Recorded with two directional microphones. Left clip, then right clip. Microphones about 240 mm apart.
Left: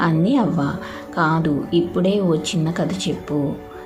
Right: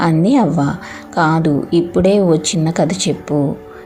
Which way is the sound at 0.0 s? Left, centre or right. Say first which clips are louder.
Right 5 dB; centre.